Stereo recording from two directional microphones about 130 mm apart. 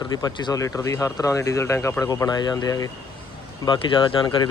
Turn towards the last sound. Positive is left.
turn(degrees=35)  # may be behind; listen again after turning